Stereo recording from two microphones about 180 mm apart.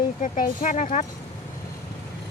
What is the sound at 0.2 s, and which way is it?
Speech, 45° left (ahead or behind).